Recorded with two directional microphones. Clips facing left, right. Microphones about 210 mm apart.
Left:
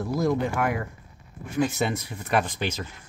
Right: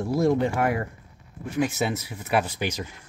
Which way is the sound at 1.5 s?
5° right (ahead or behind).